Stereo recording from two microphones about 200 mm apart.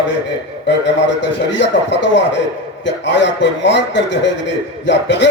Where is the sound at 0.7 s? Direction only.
65° left (ahead or behind).